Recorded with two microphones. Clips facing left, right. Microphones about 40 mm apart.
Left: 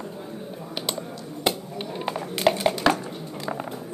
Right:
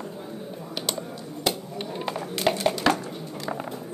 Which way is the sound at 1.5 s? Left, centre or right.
Centre.